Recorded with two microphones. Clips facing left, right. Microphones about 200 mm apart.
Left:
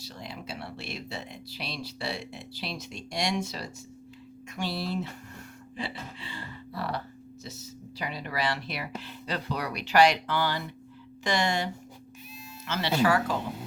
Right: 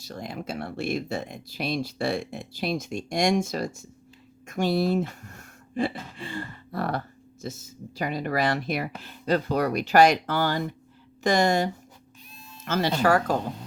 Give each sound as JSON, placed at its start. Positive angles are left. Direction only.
{"t": 0.0, "sound": "speech", "side_deg": -50}